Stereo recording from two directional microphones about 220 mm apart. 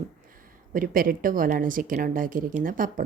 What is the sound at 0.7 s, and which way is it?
A woman's voice, 40° right (ahead or behind).